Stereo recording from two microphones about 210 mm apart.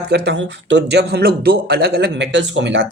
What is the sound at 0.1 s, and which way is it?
Speech, 50° right (ahead or behind).